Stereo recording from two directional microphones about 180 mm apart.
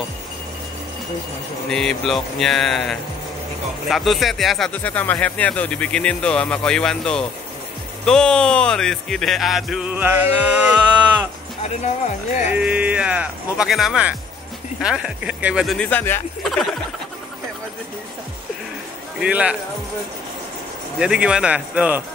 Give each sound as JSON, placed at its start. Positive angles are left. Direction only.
{"t": 1.7, "sound": "speech", "side_deg": 5}
{"t": 11.6, "sound": "speech", "side_deg": 40}
{"t": 12.4, "sound": "speech", "side_deg": -5}
{"t": 19.1, "sound": "speech", "side_deg": -5}
{"t": 21.0, "sound": "speech", "side_deg": -5}